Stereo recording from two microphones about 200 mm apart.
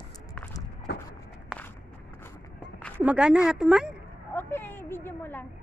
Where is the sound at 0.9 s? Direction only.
55° left (ahead or behind).